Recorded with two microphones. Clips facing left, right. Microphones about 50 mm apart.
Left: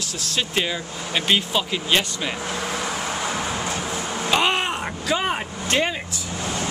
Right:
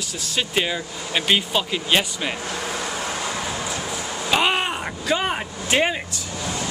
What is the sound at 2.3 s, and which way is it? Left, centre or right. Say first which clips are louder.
Vehicle: left 1 dB; left.